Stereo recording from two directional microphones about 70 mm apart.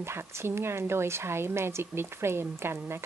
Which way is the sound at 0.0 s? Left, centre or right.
Right.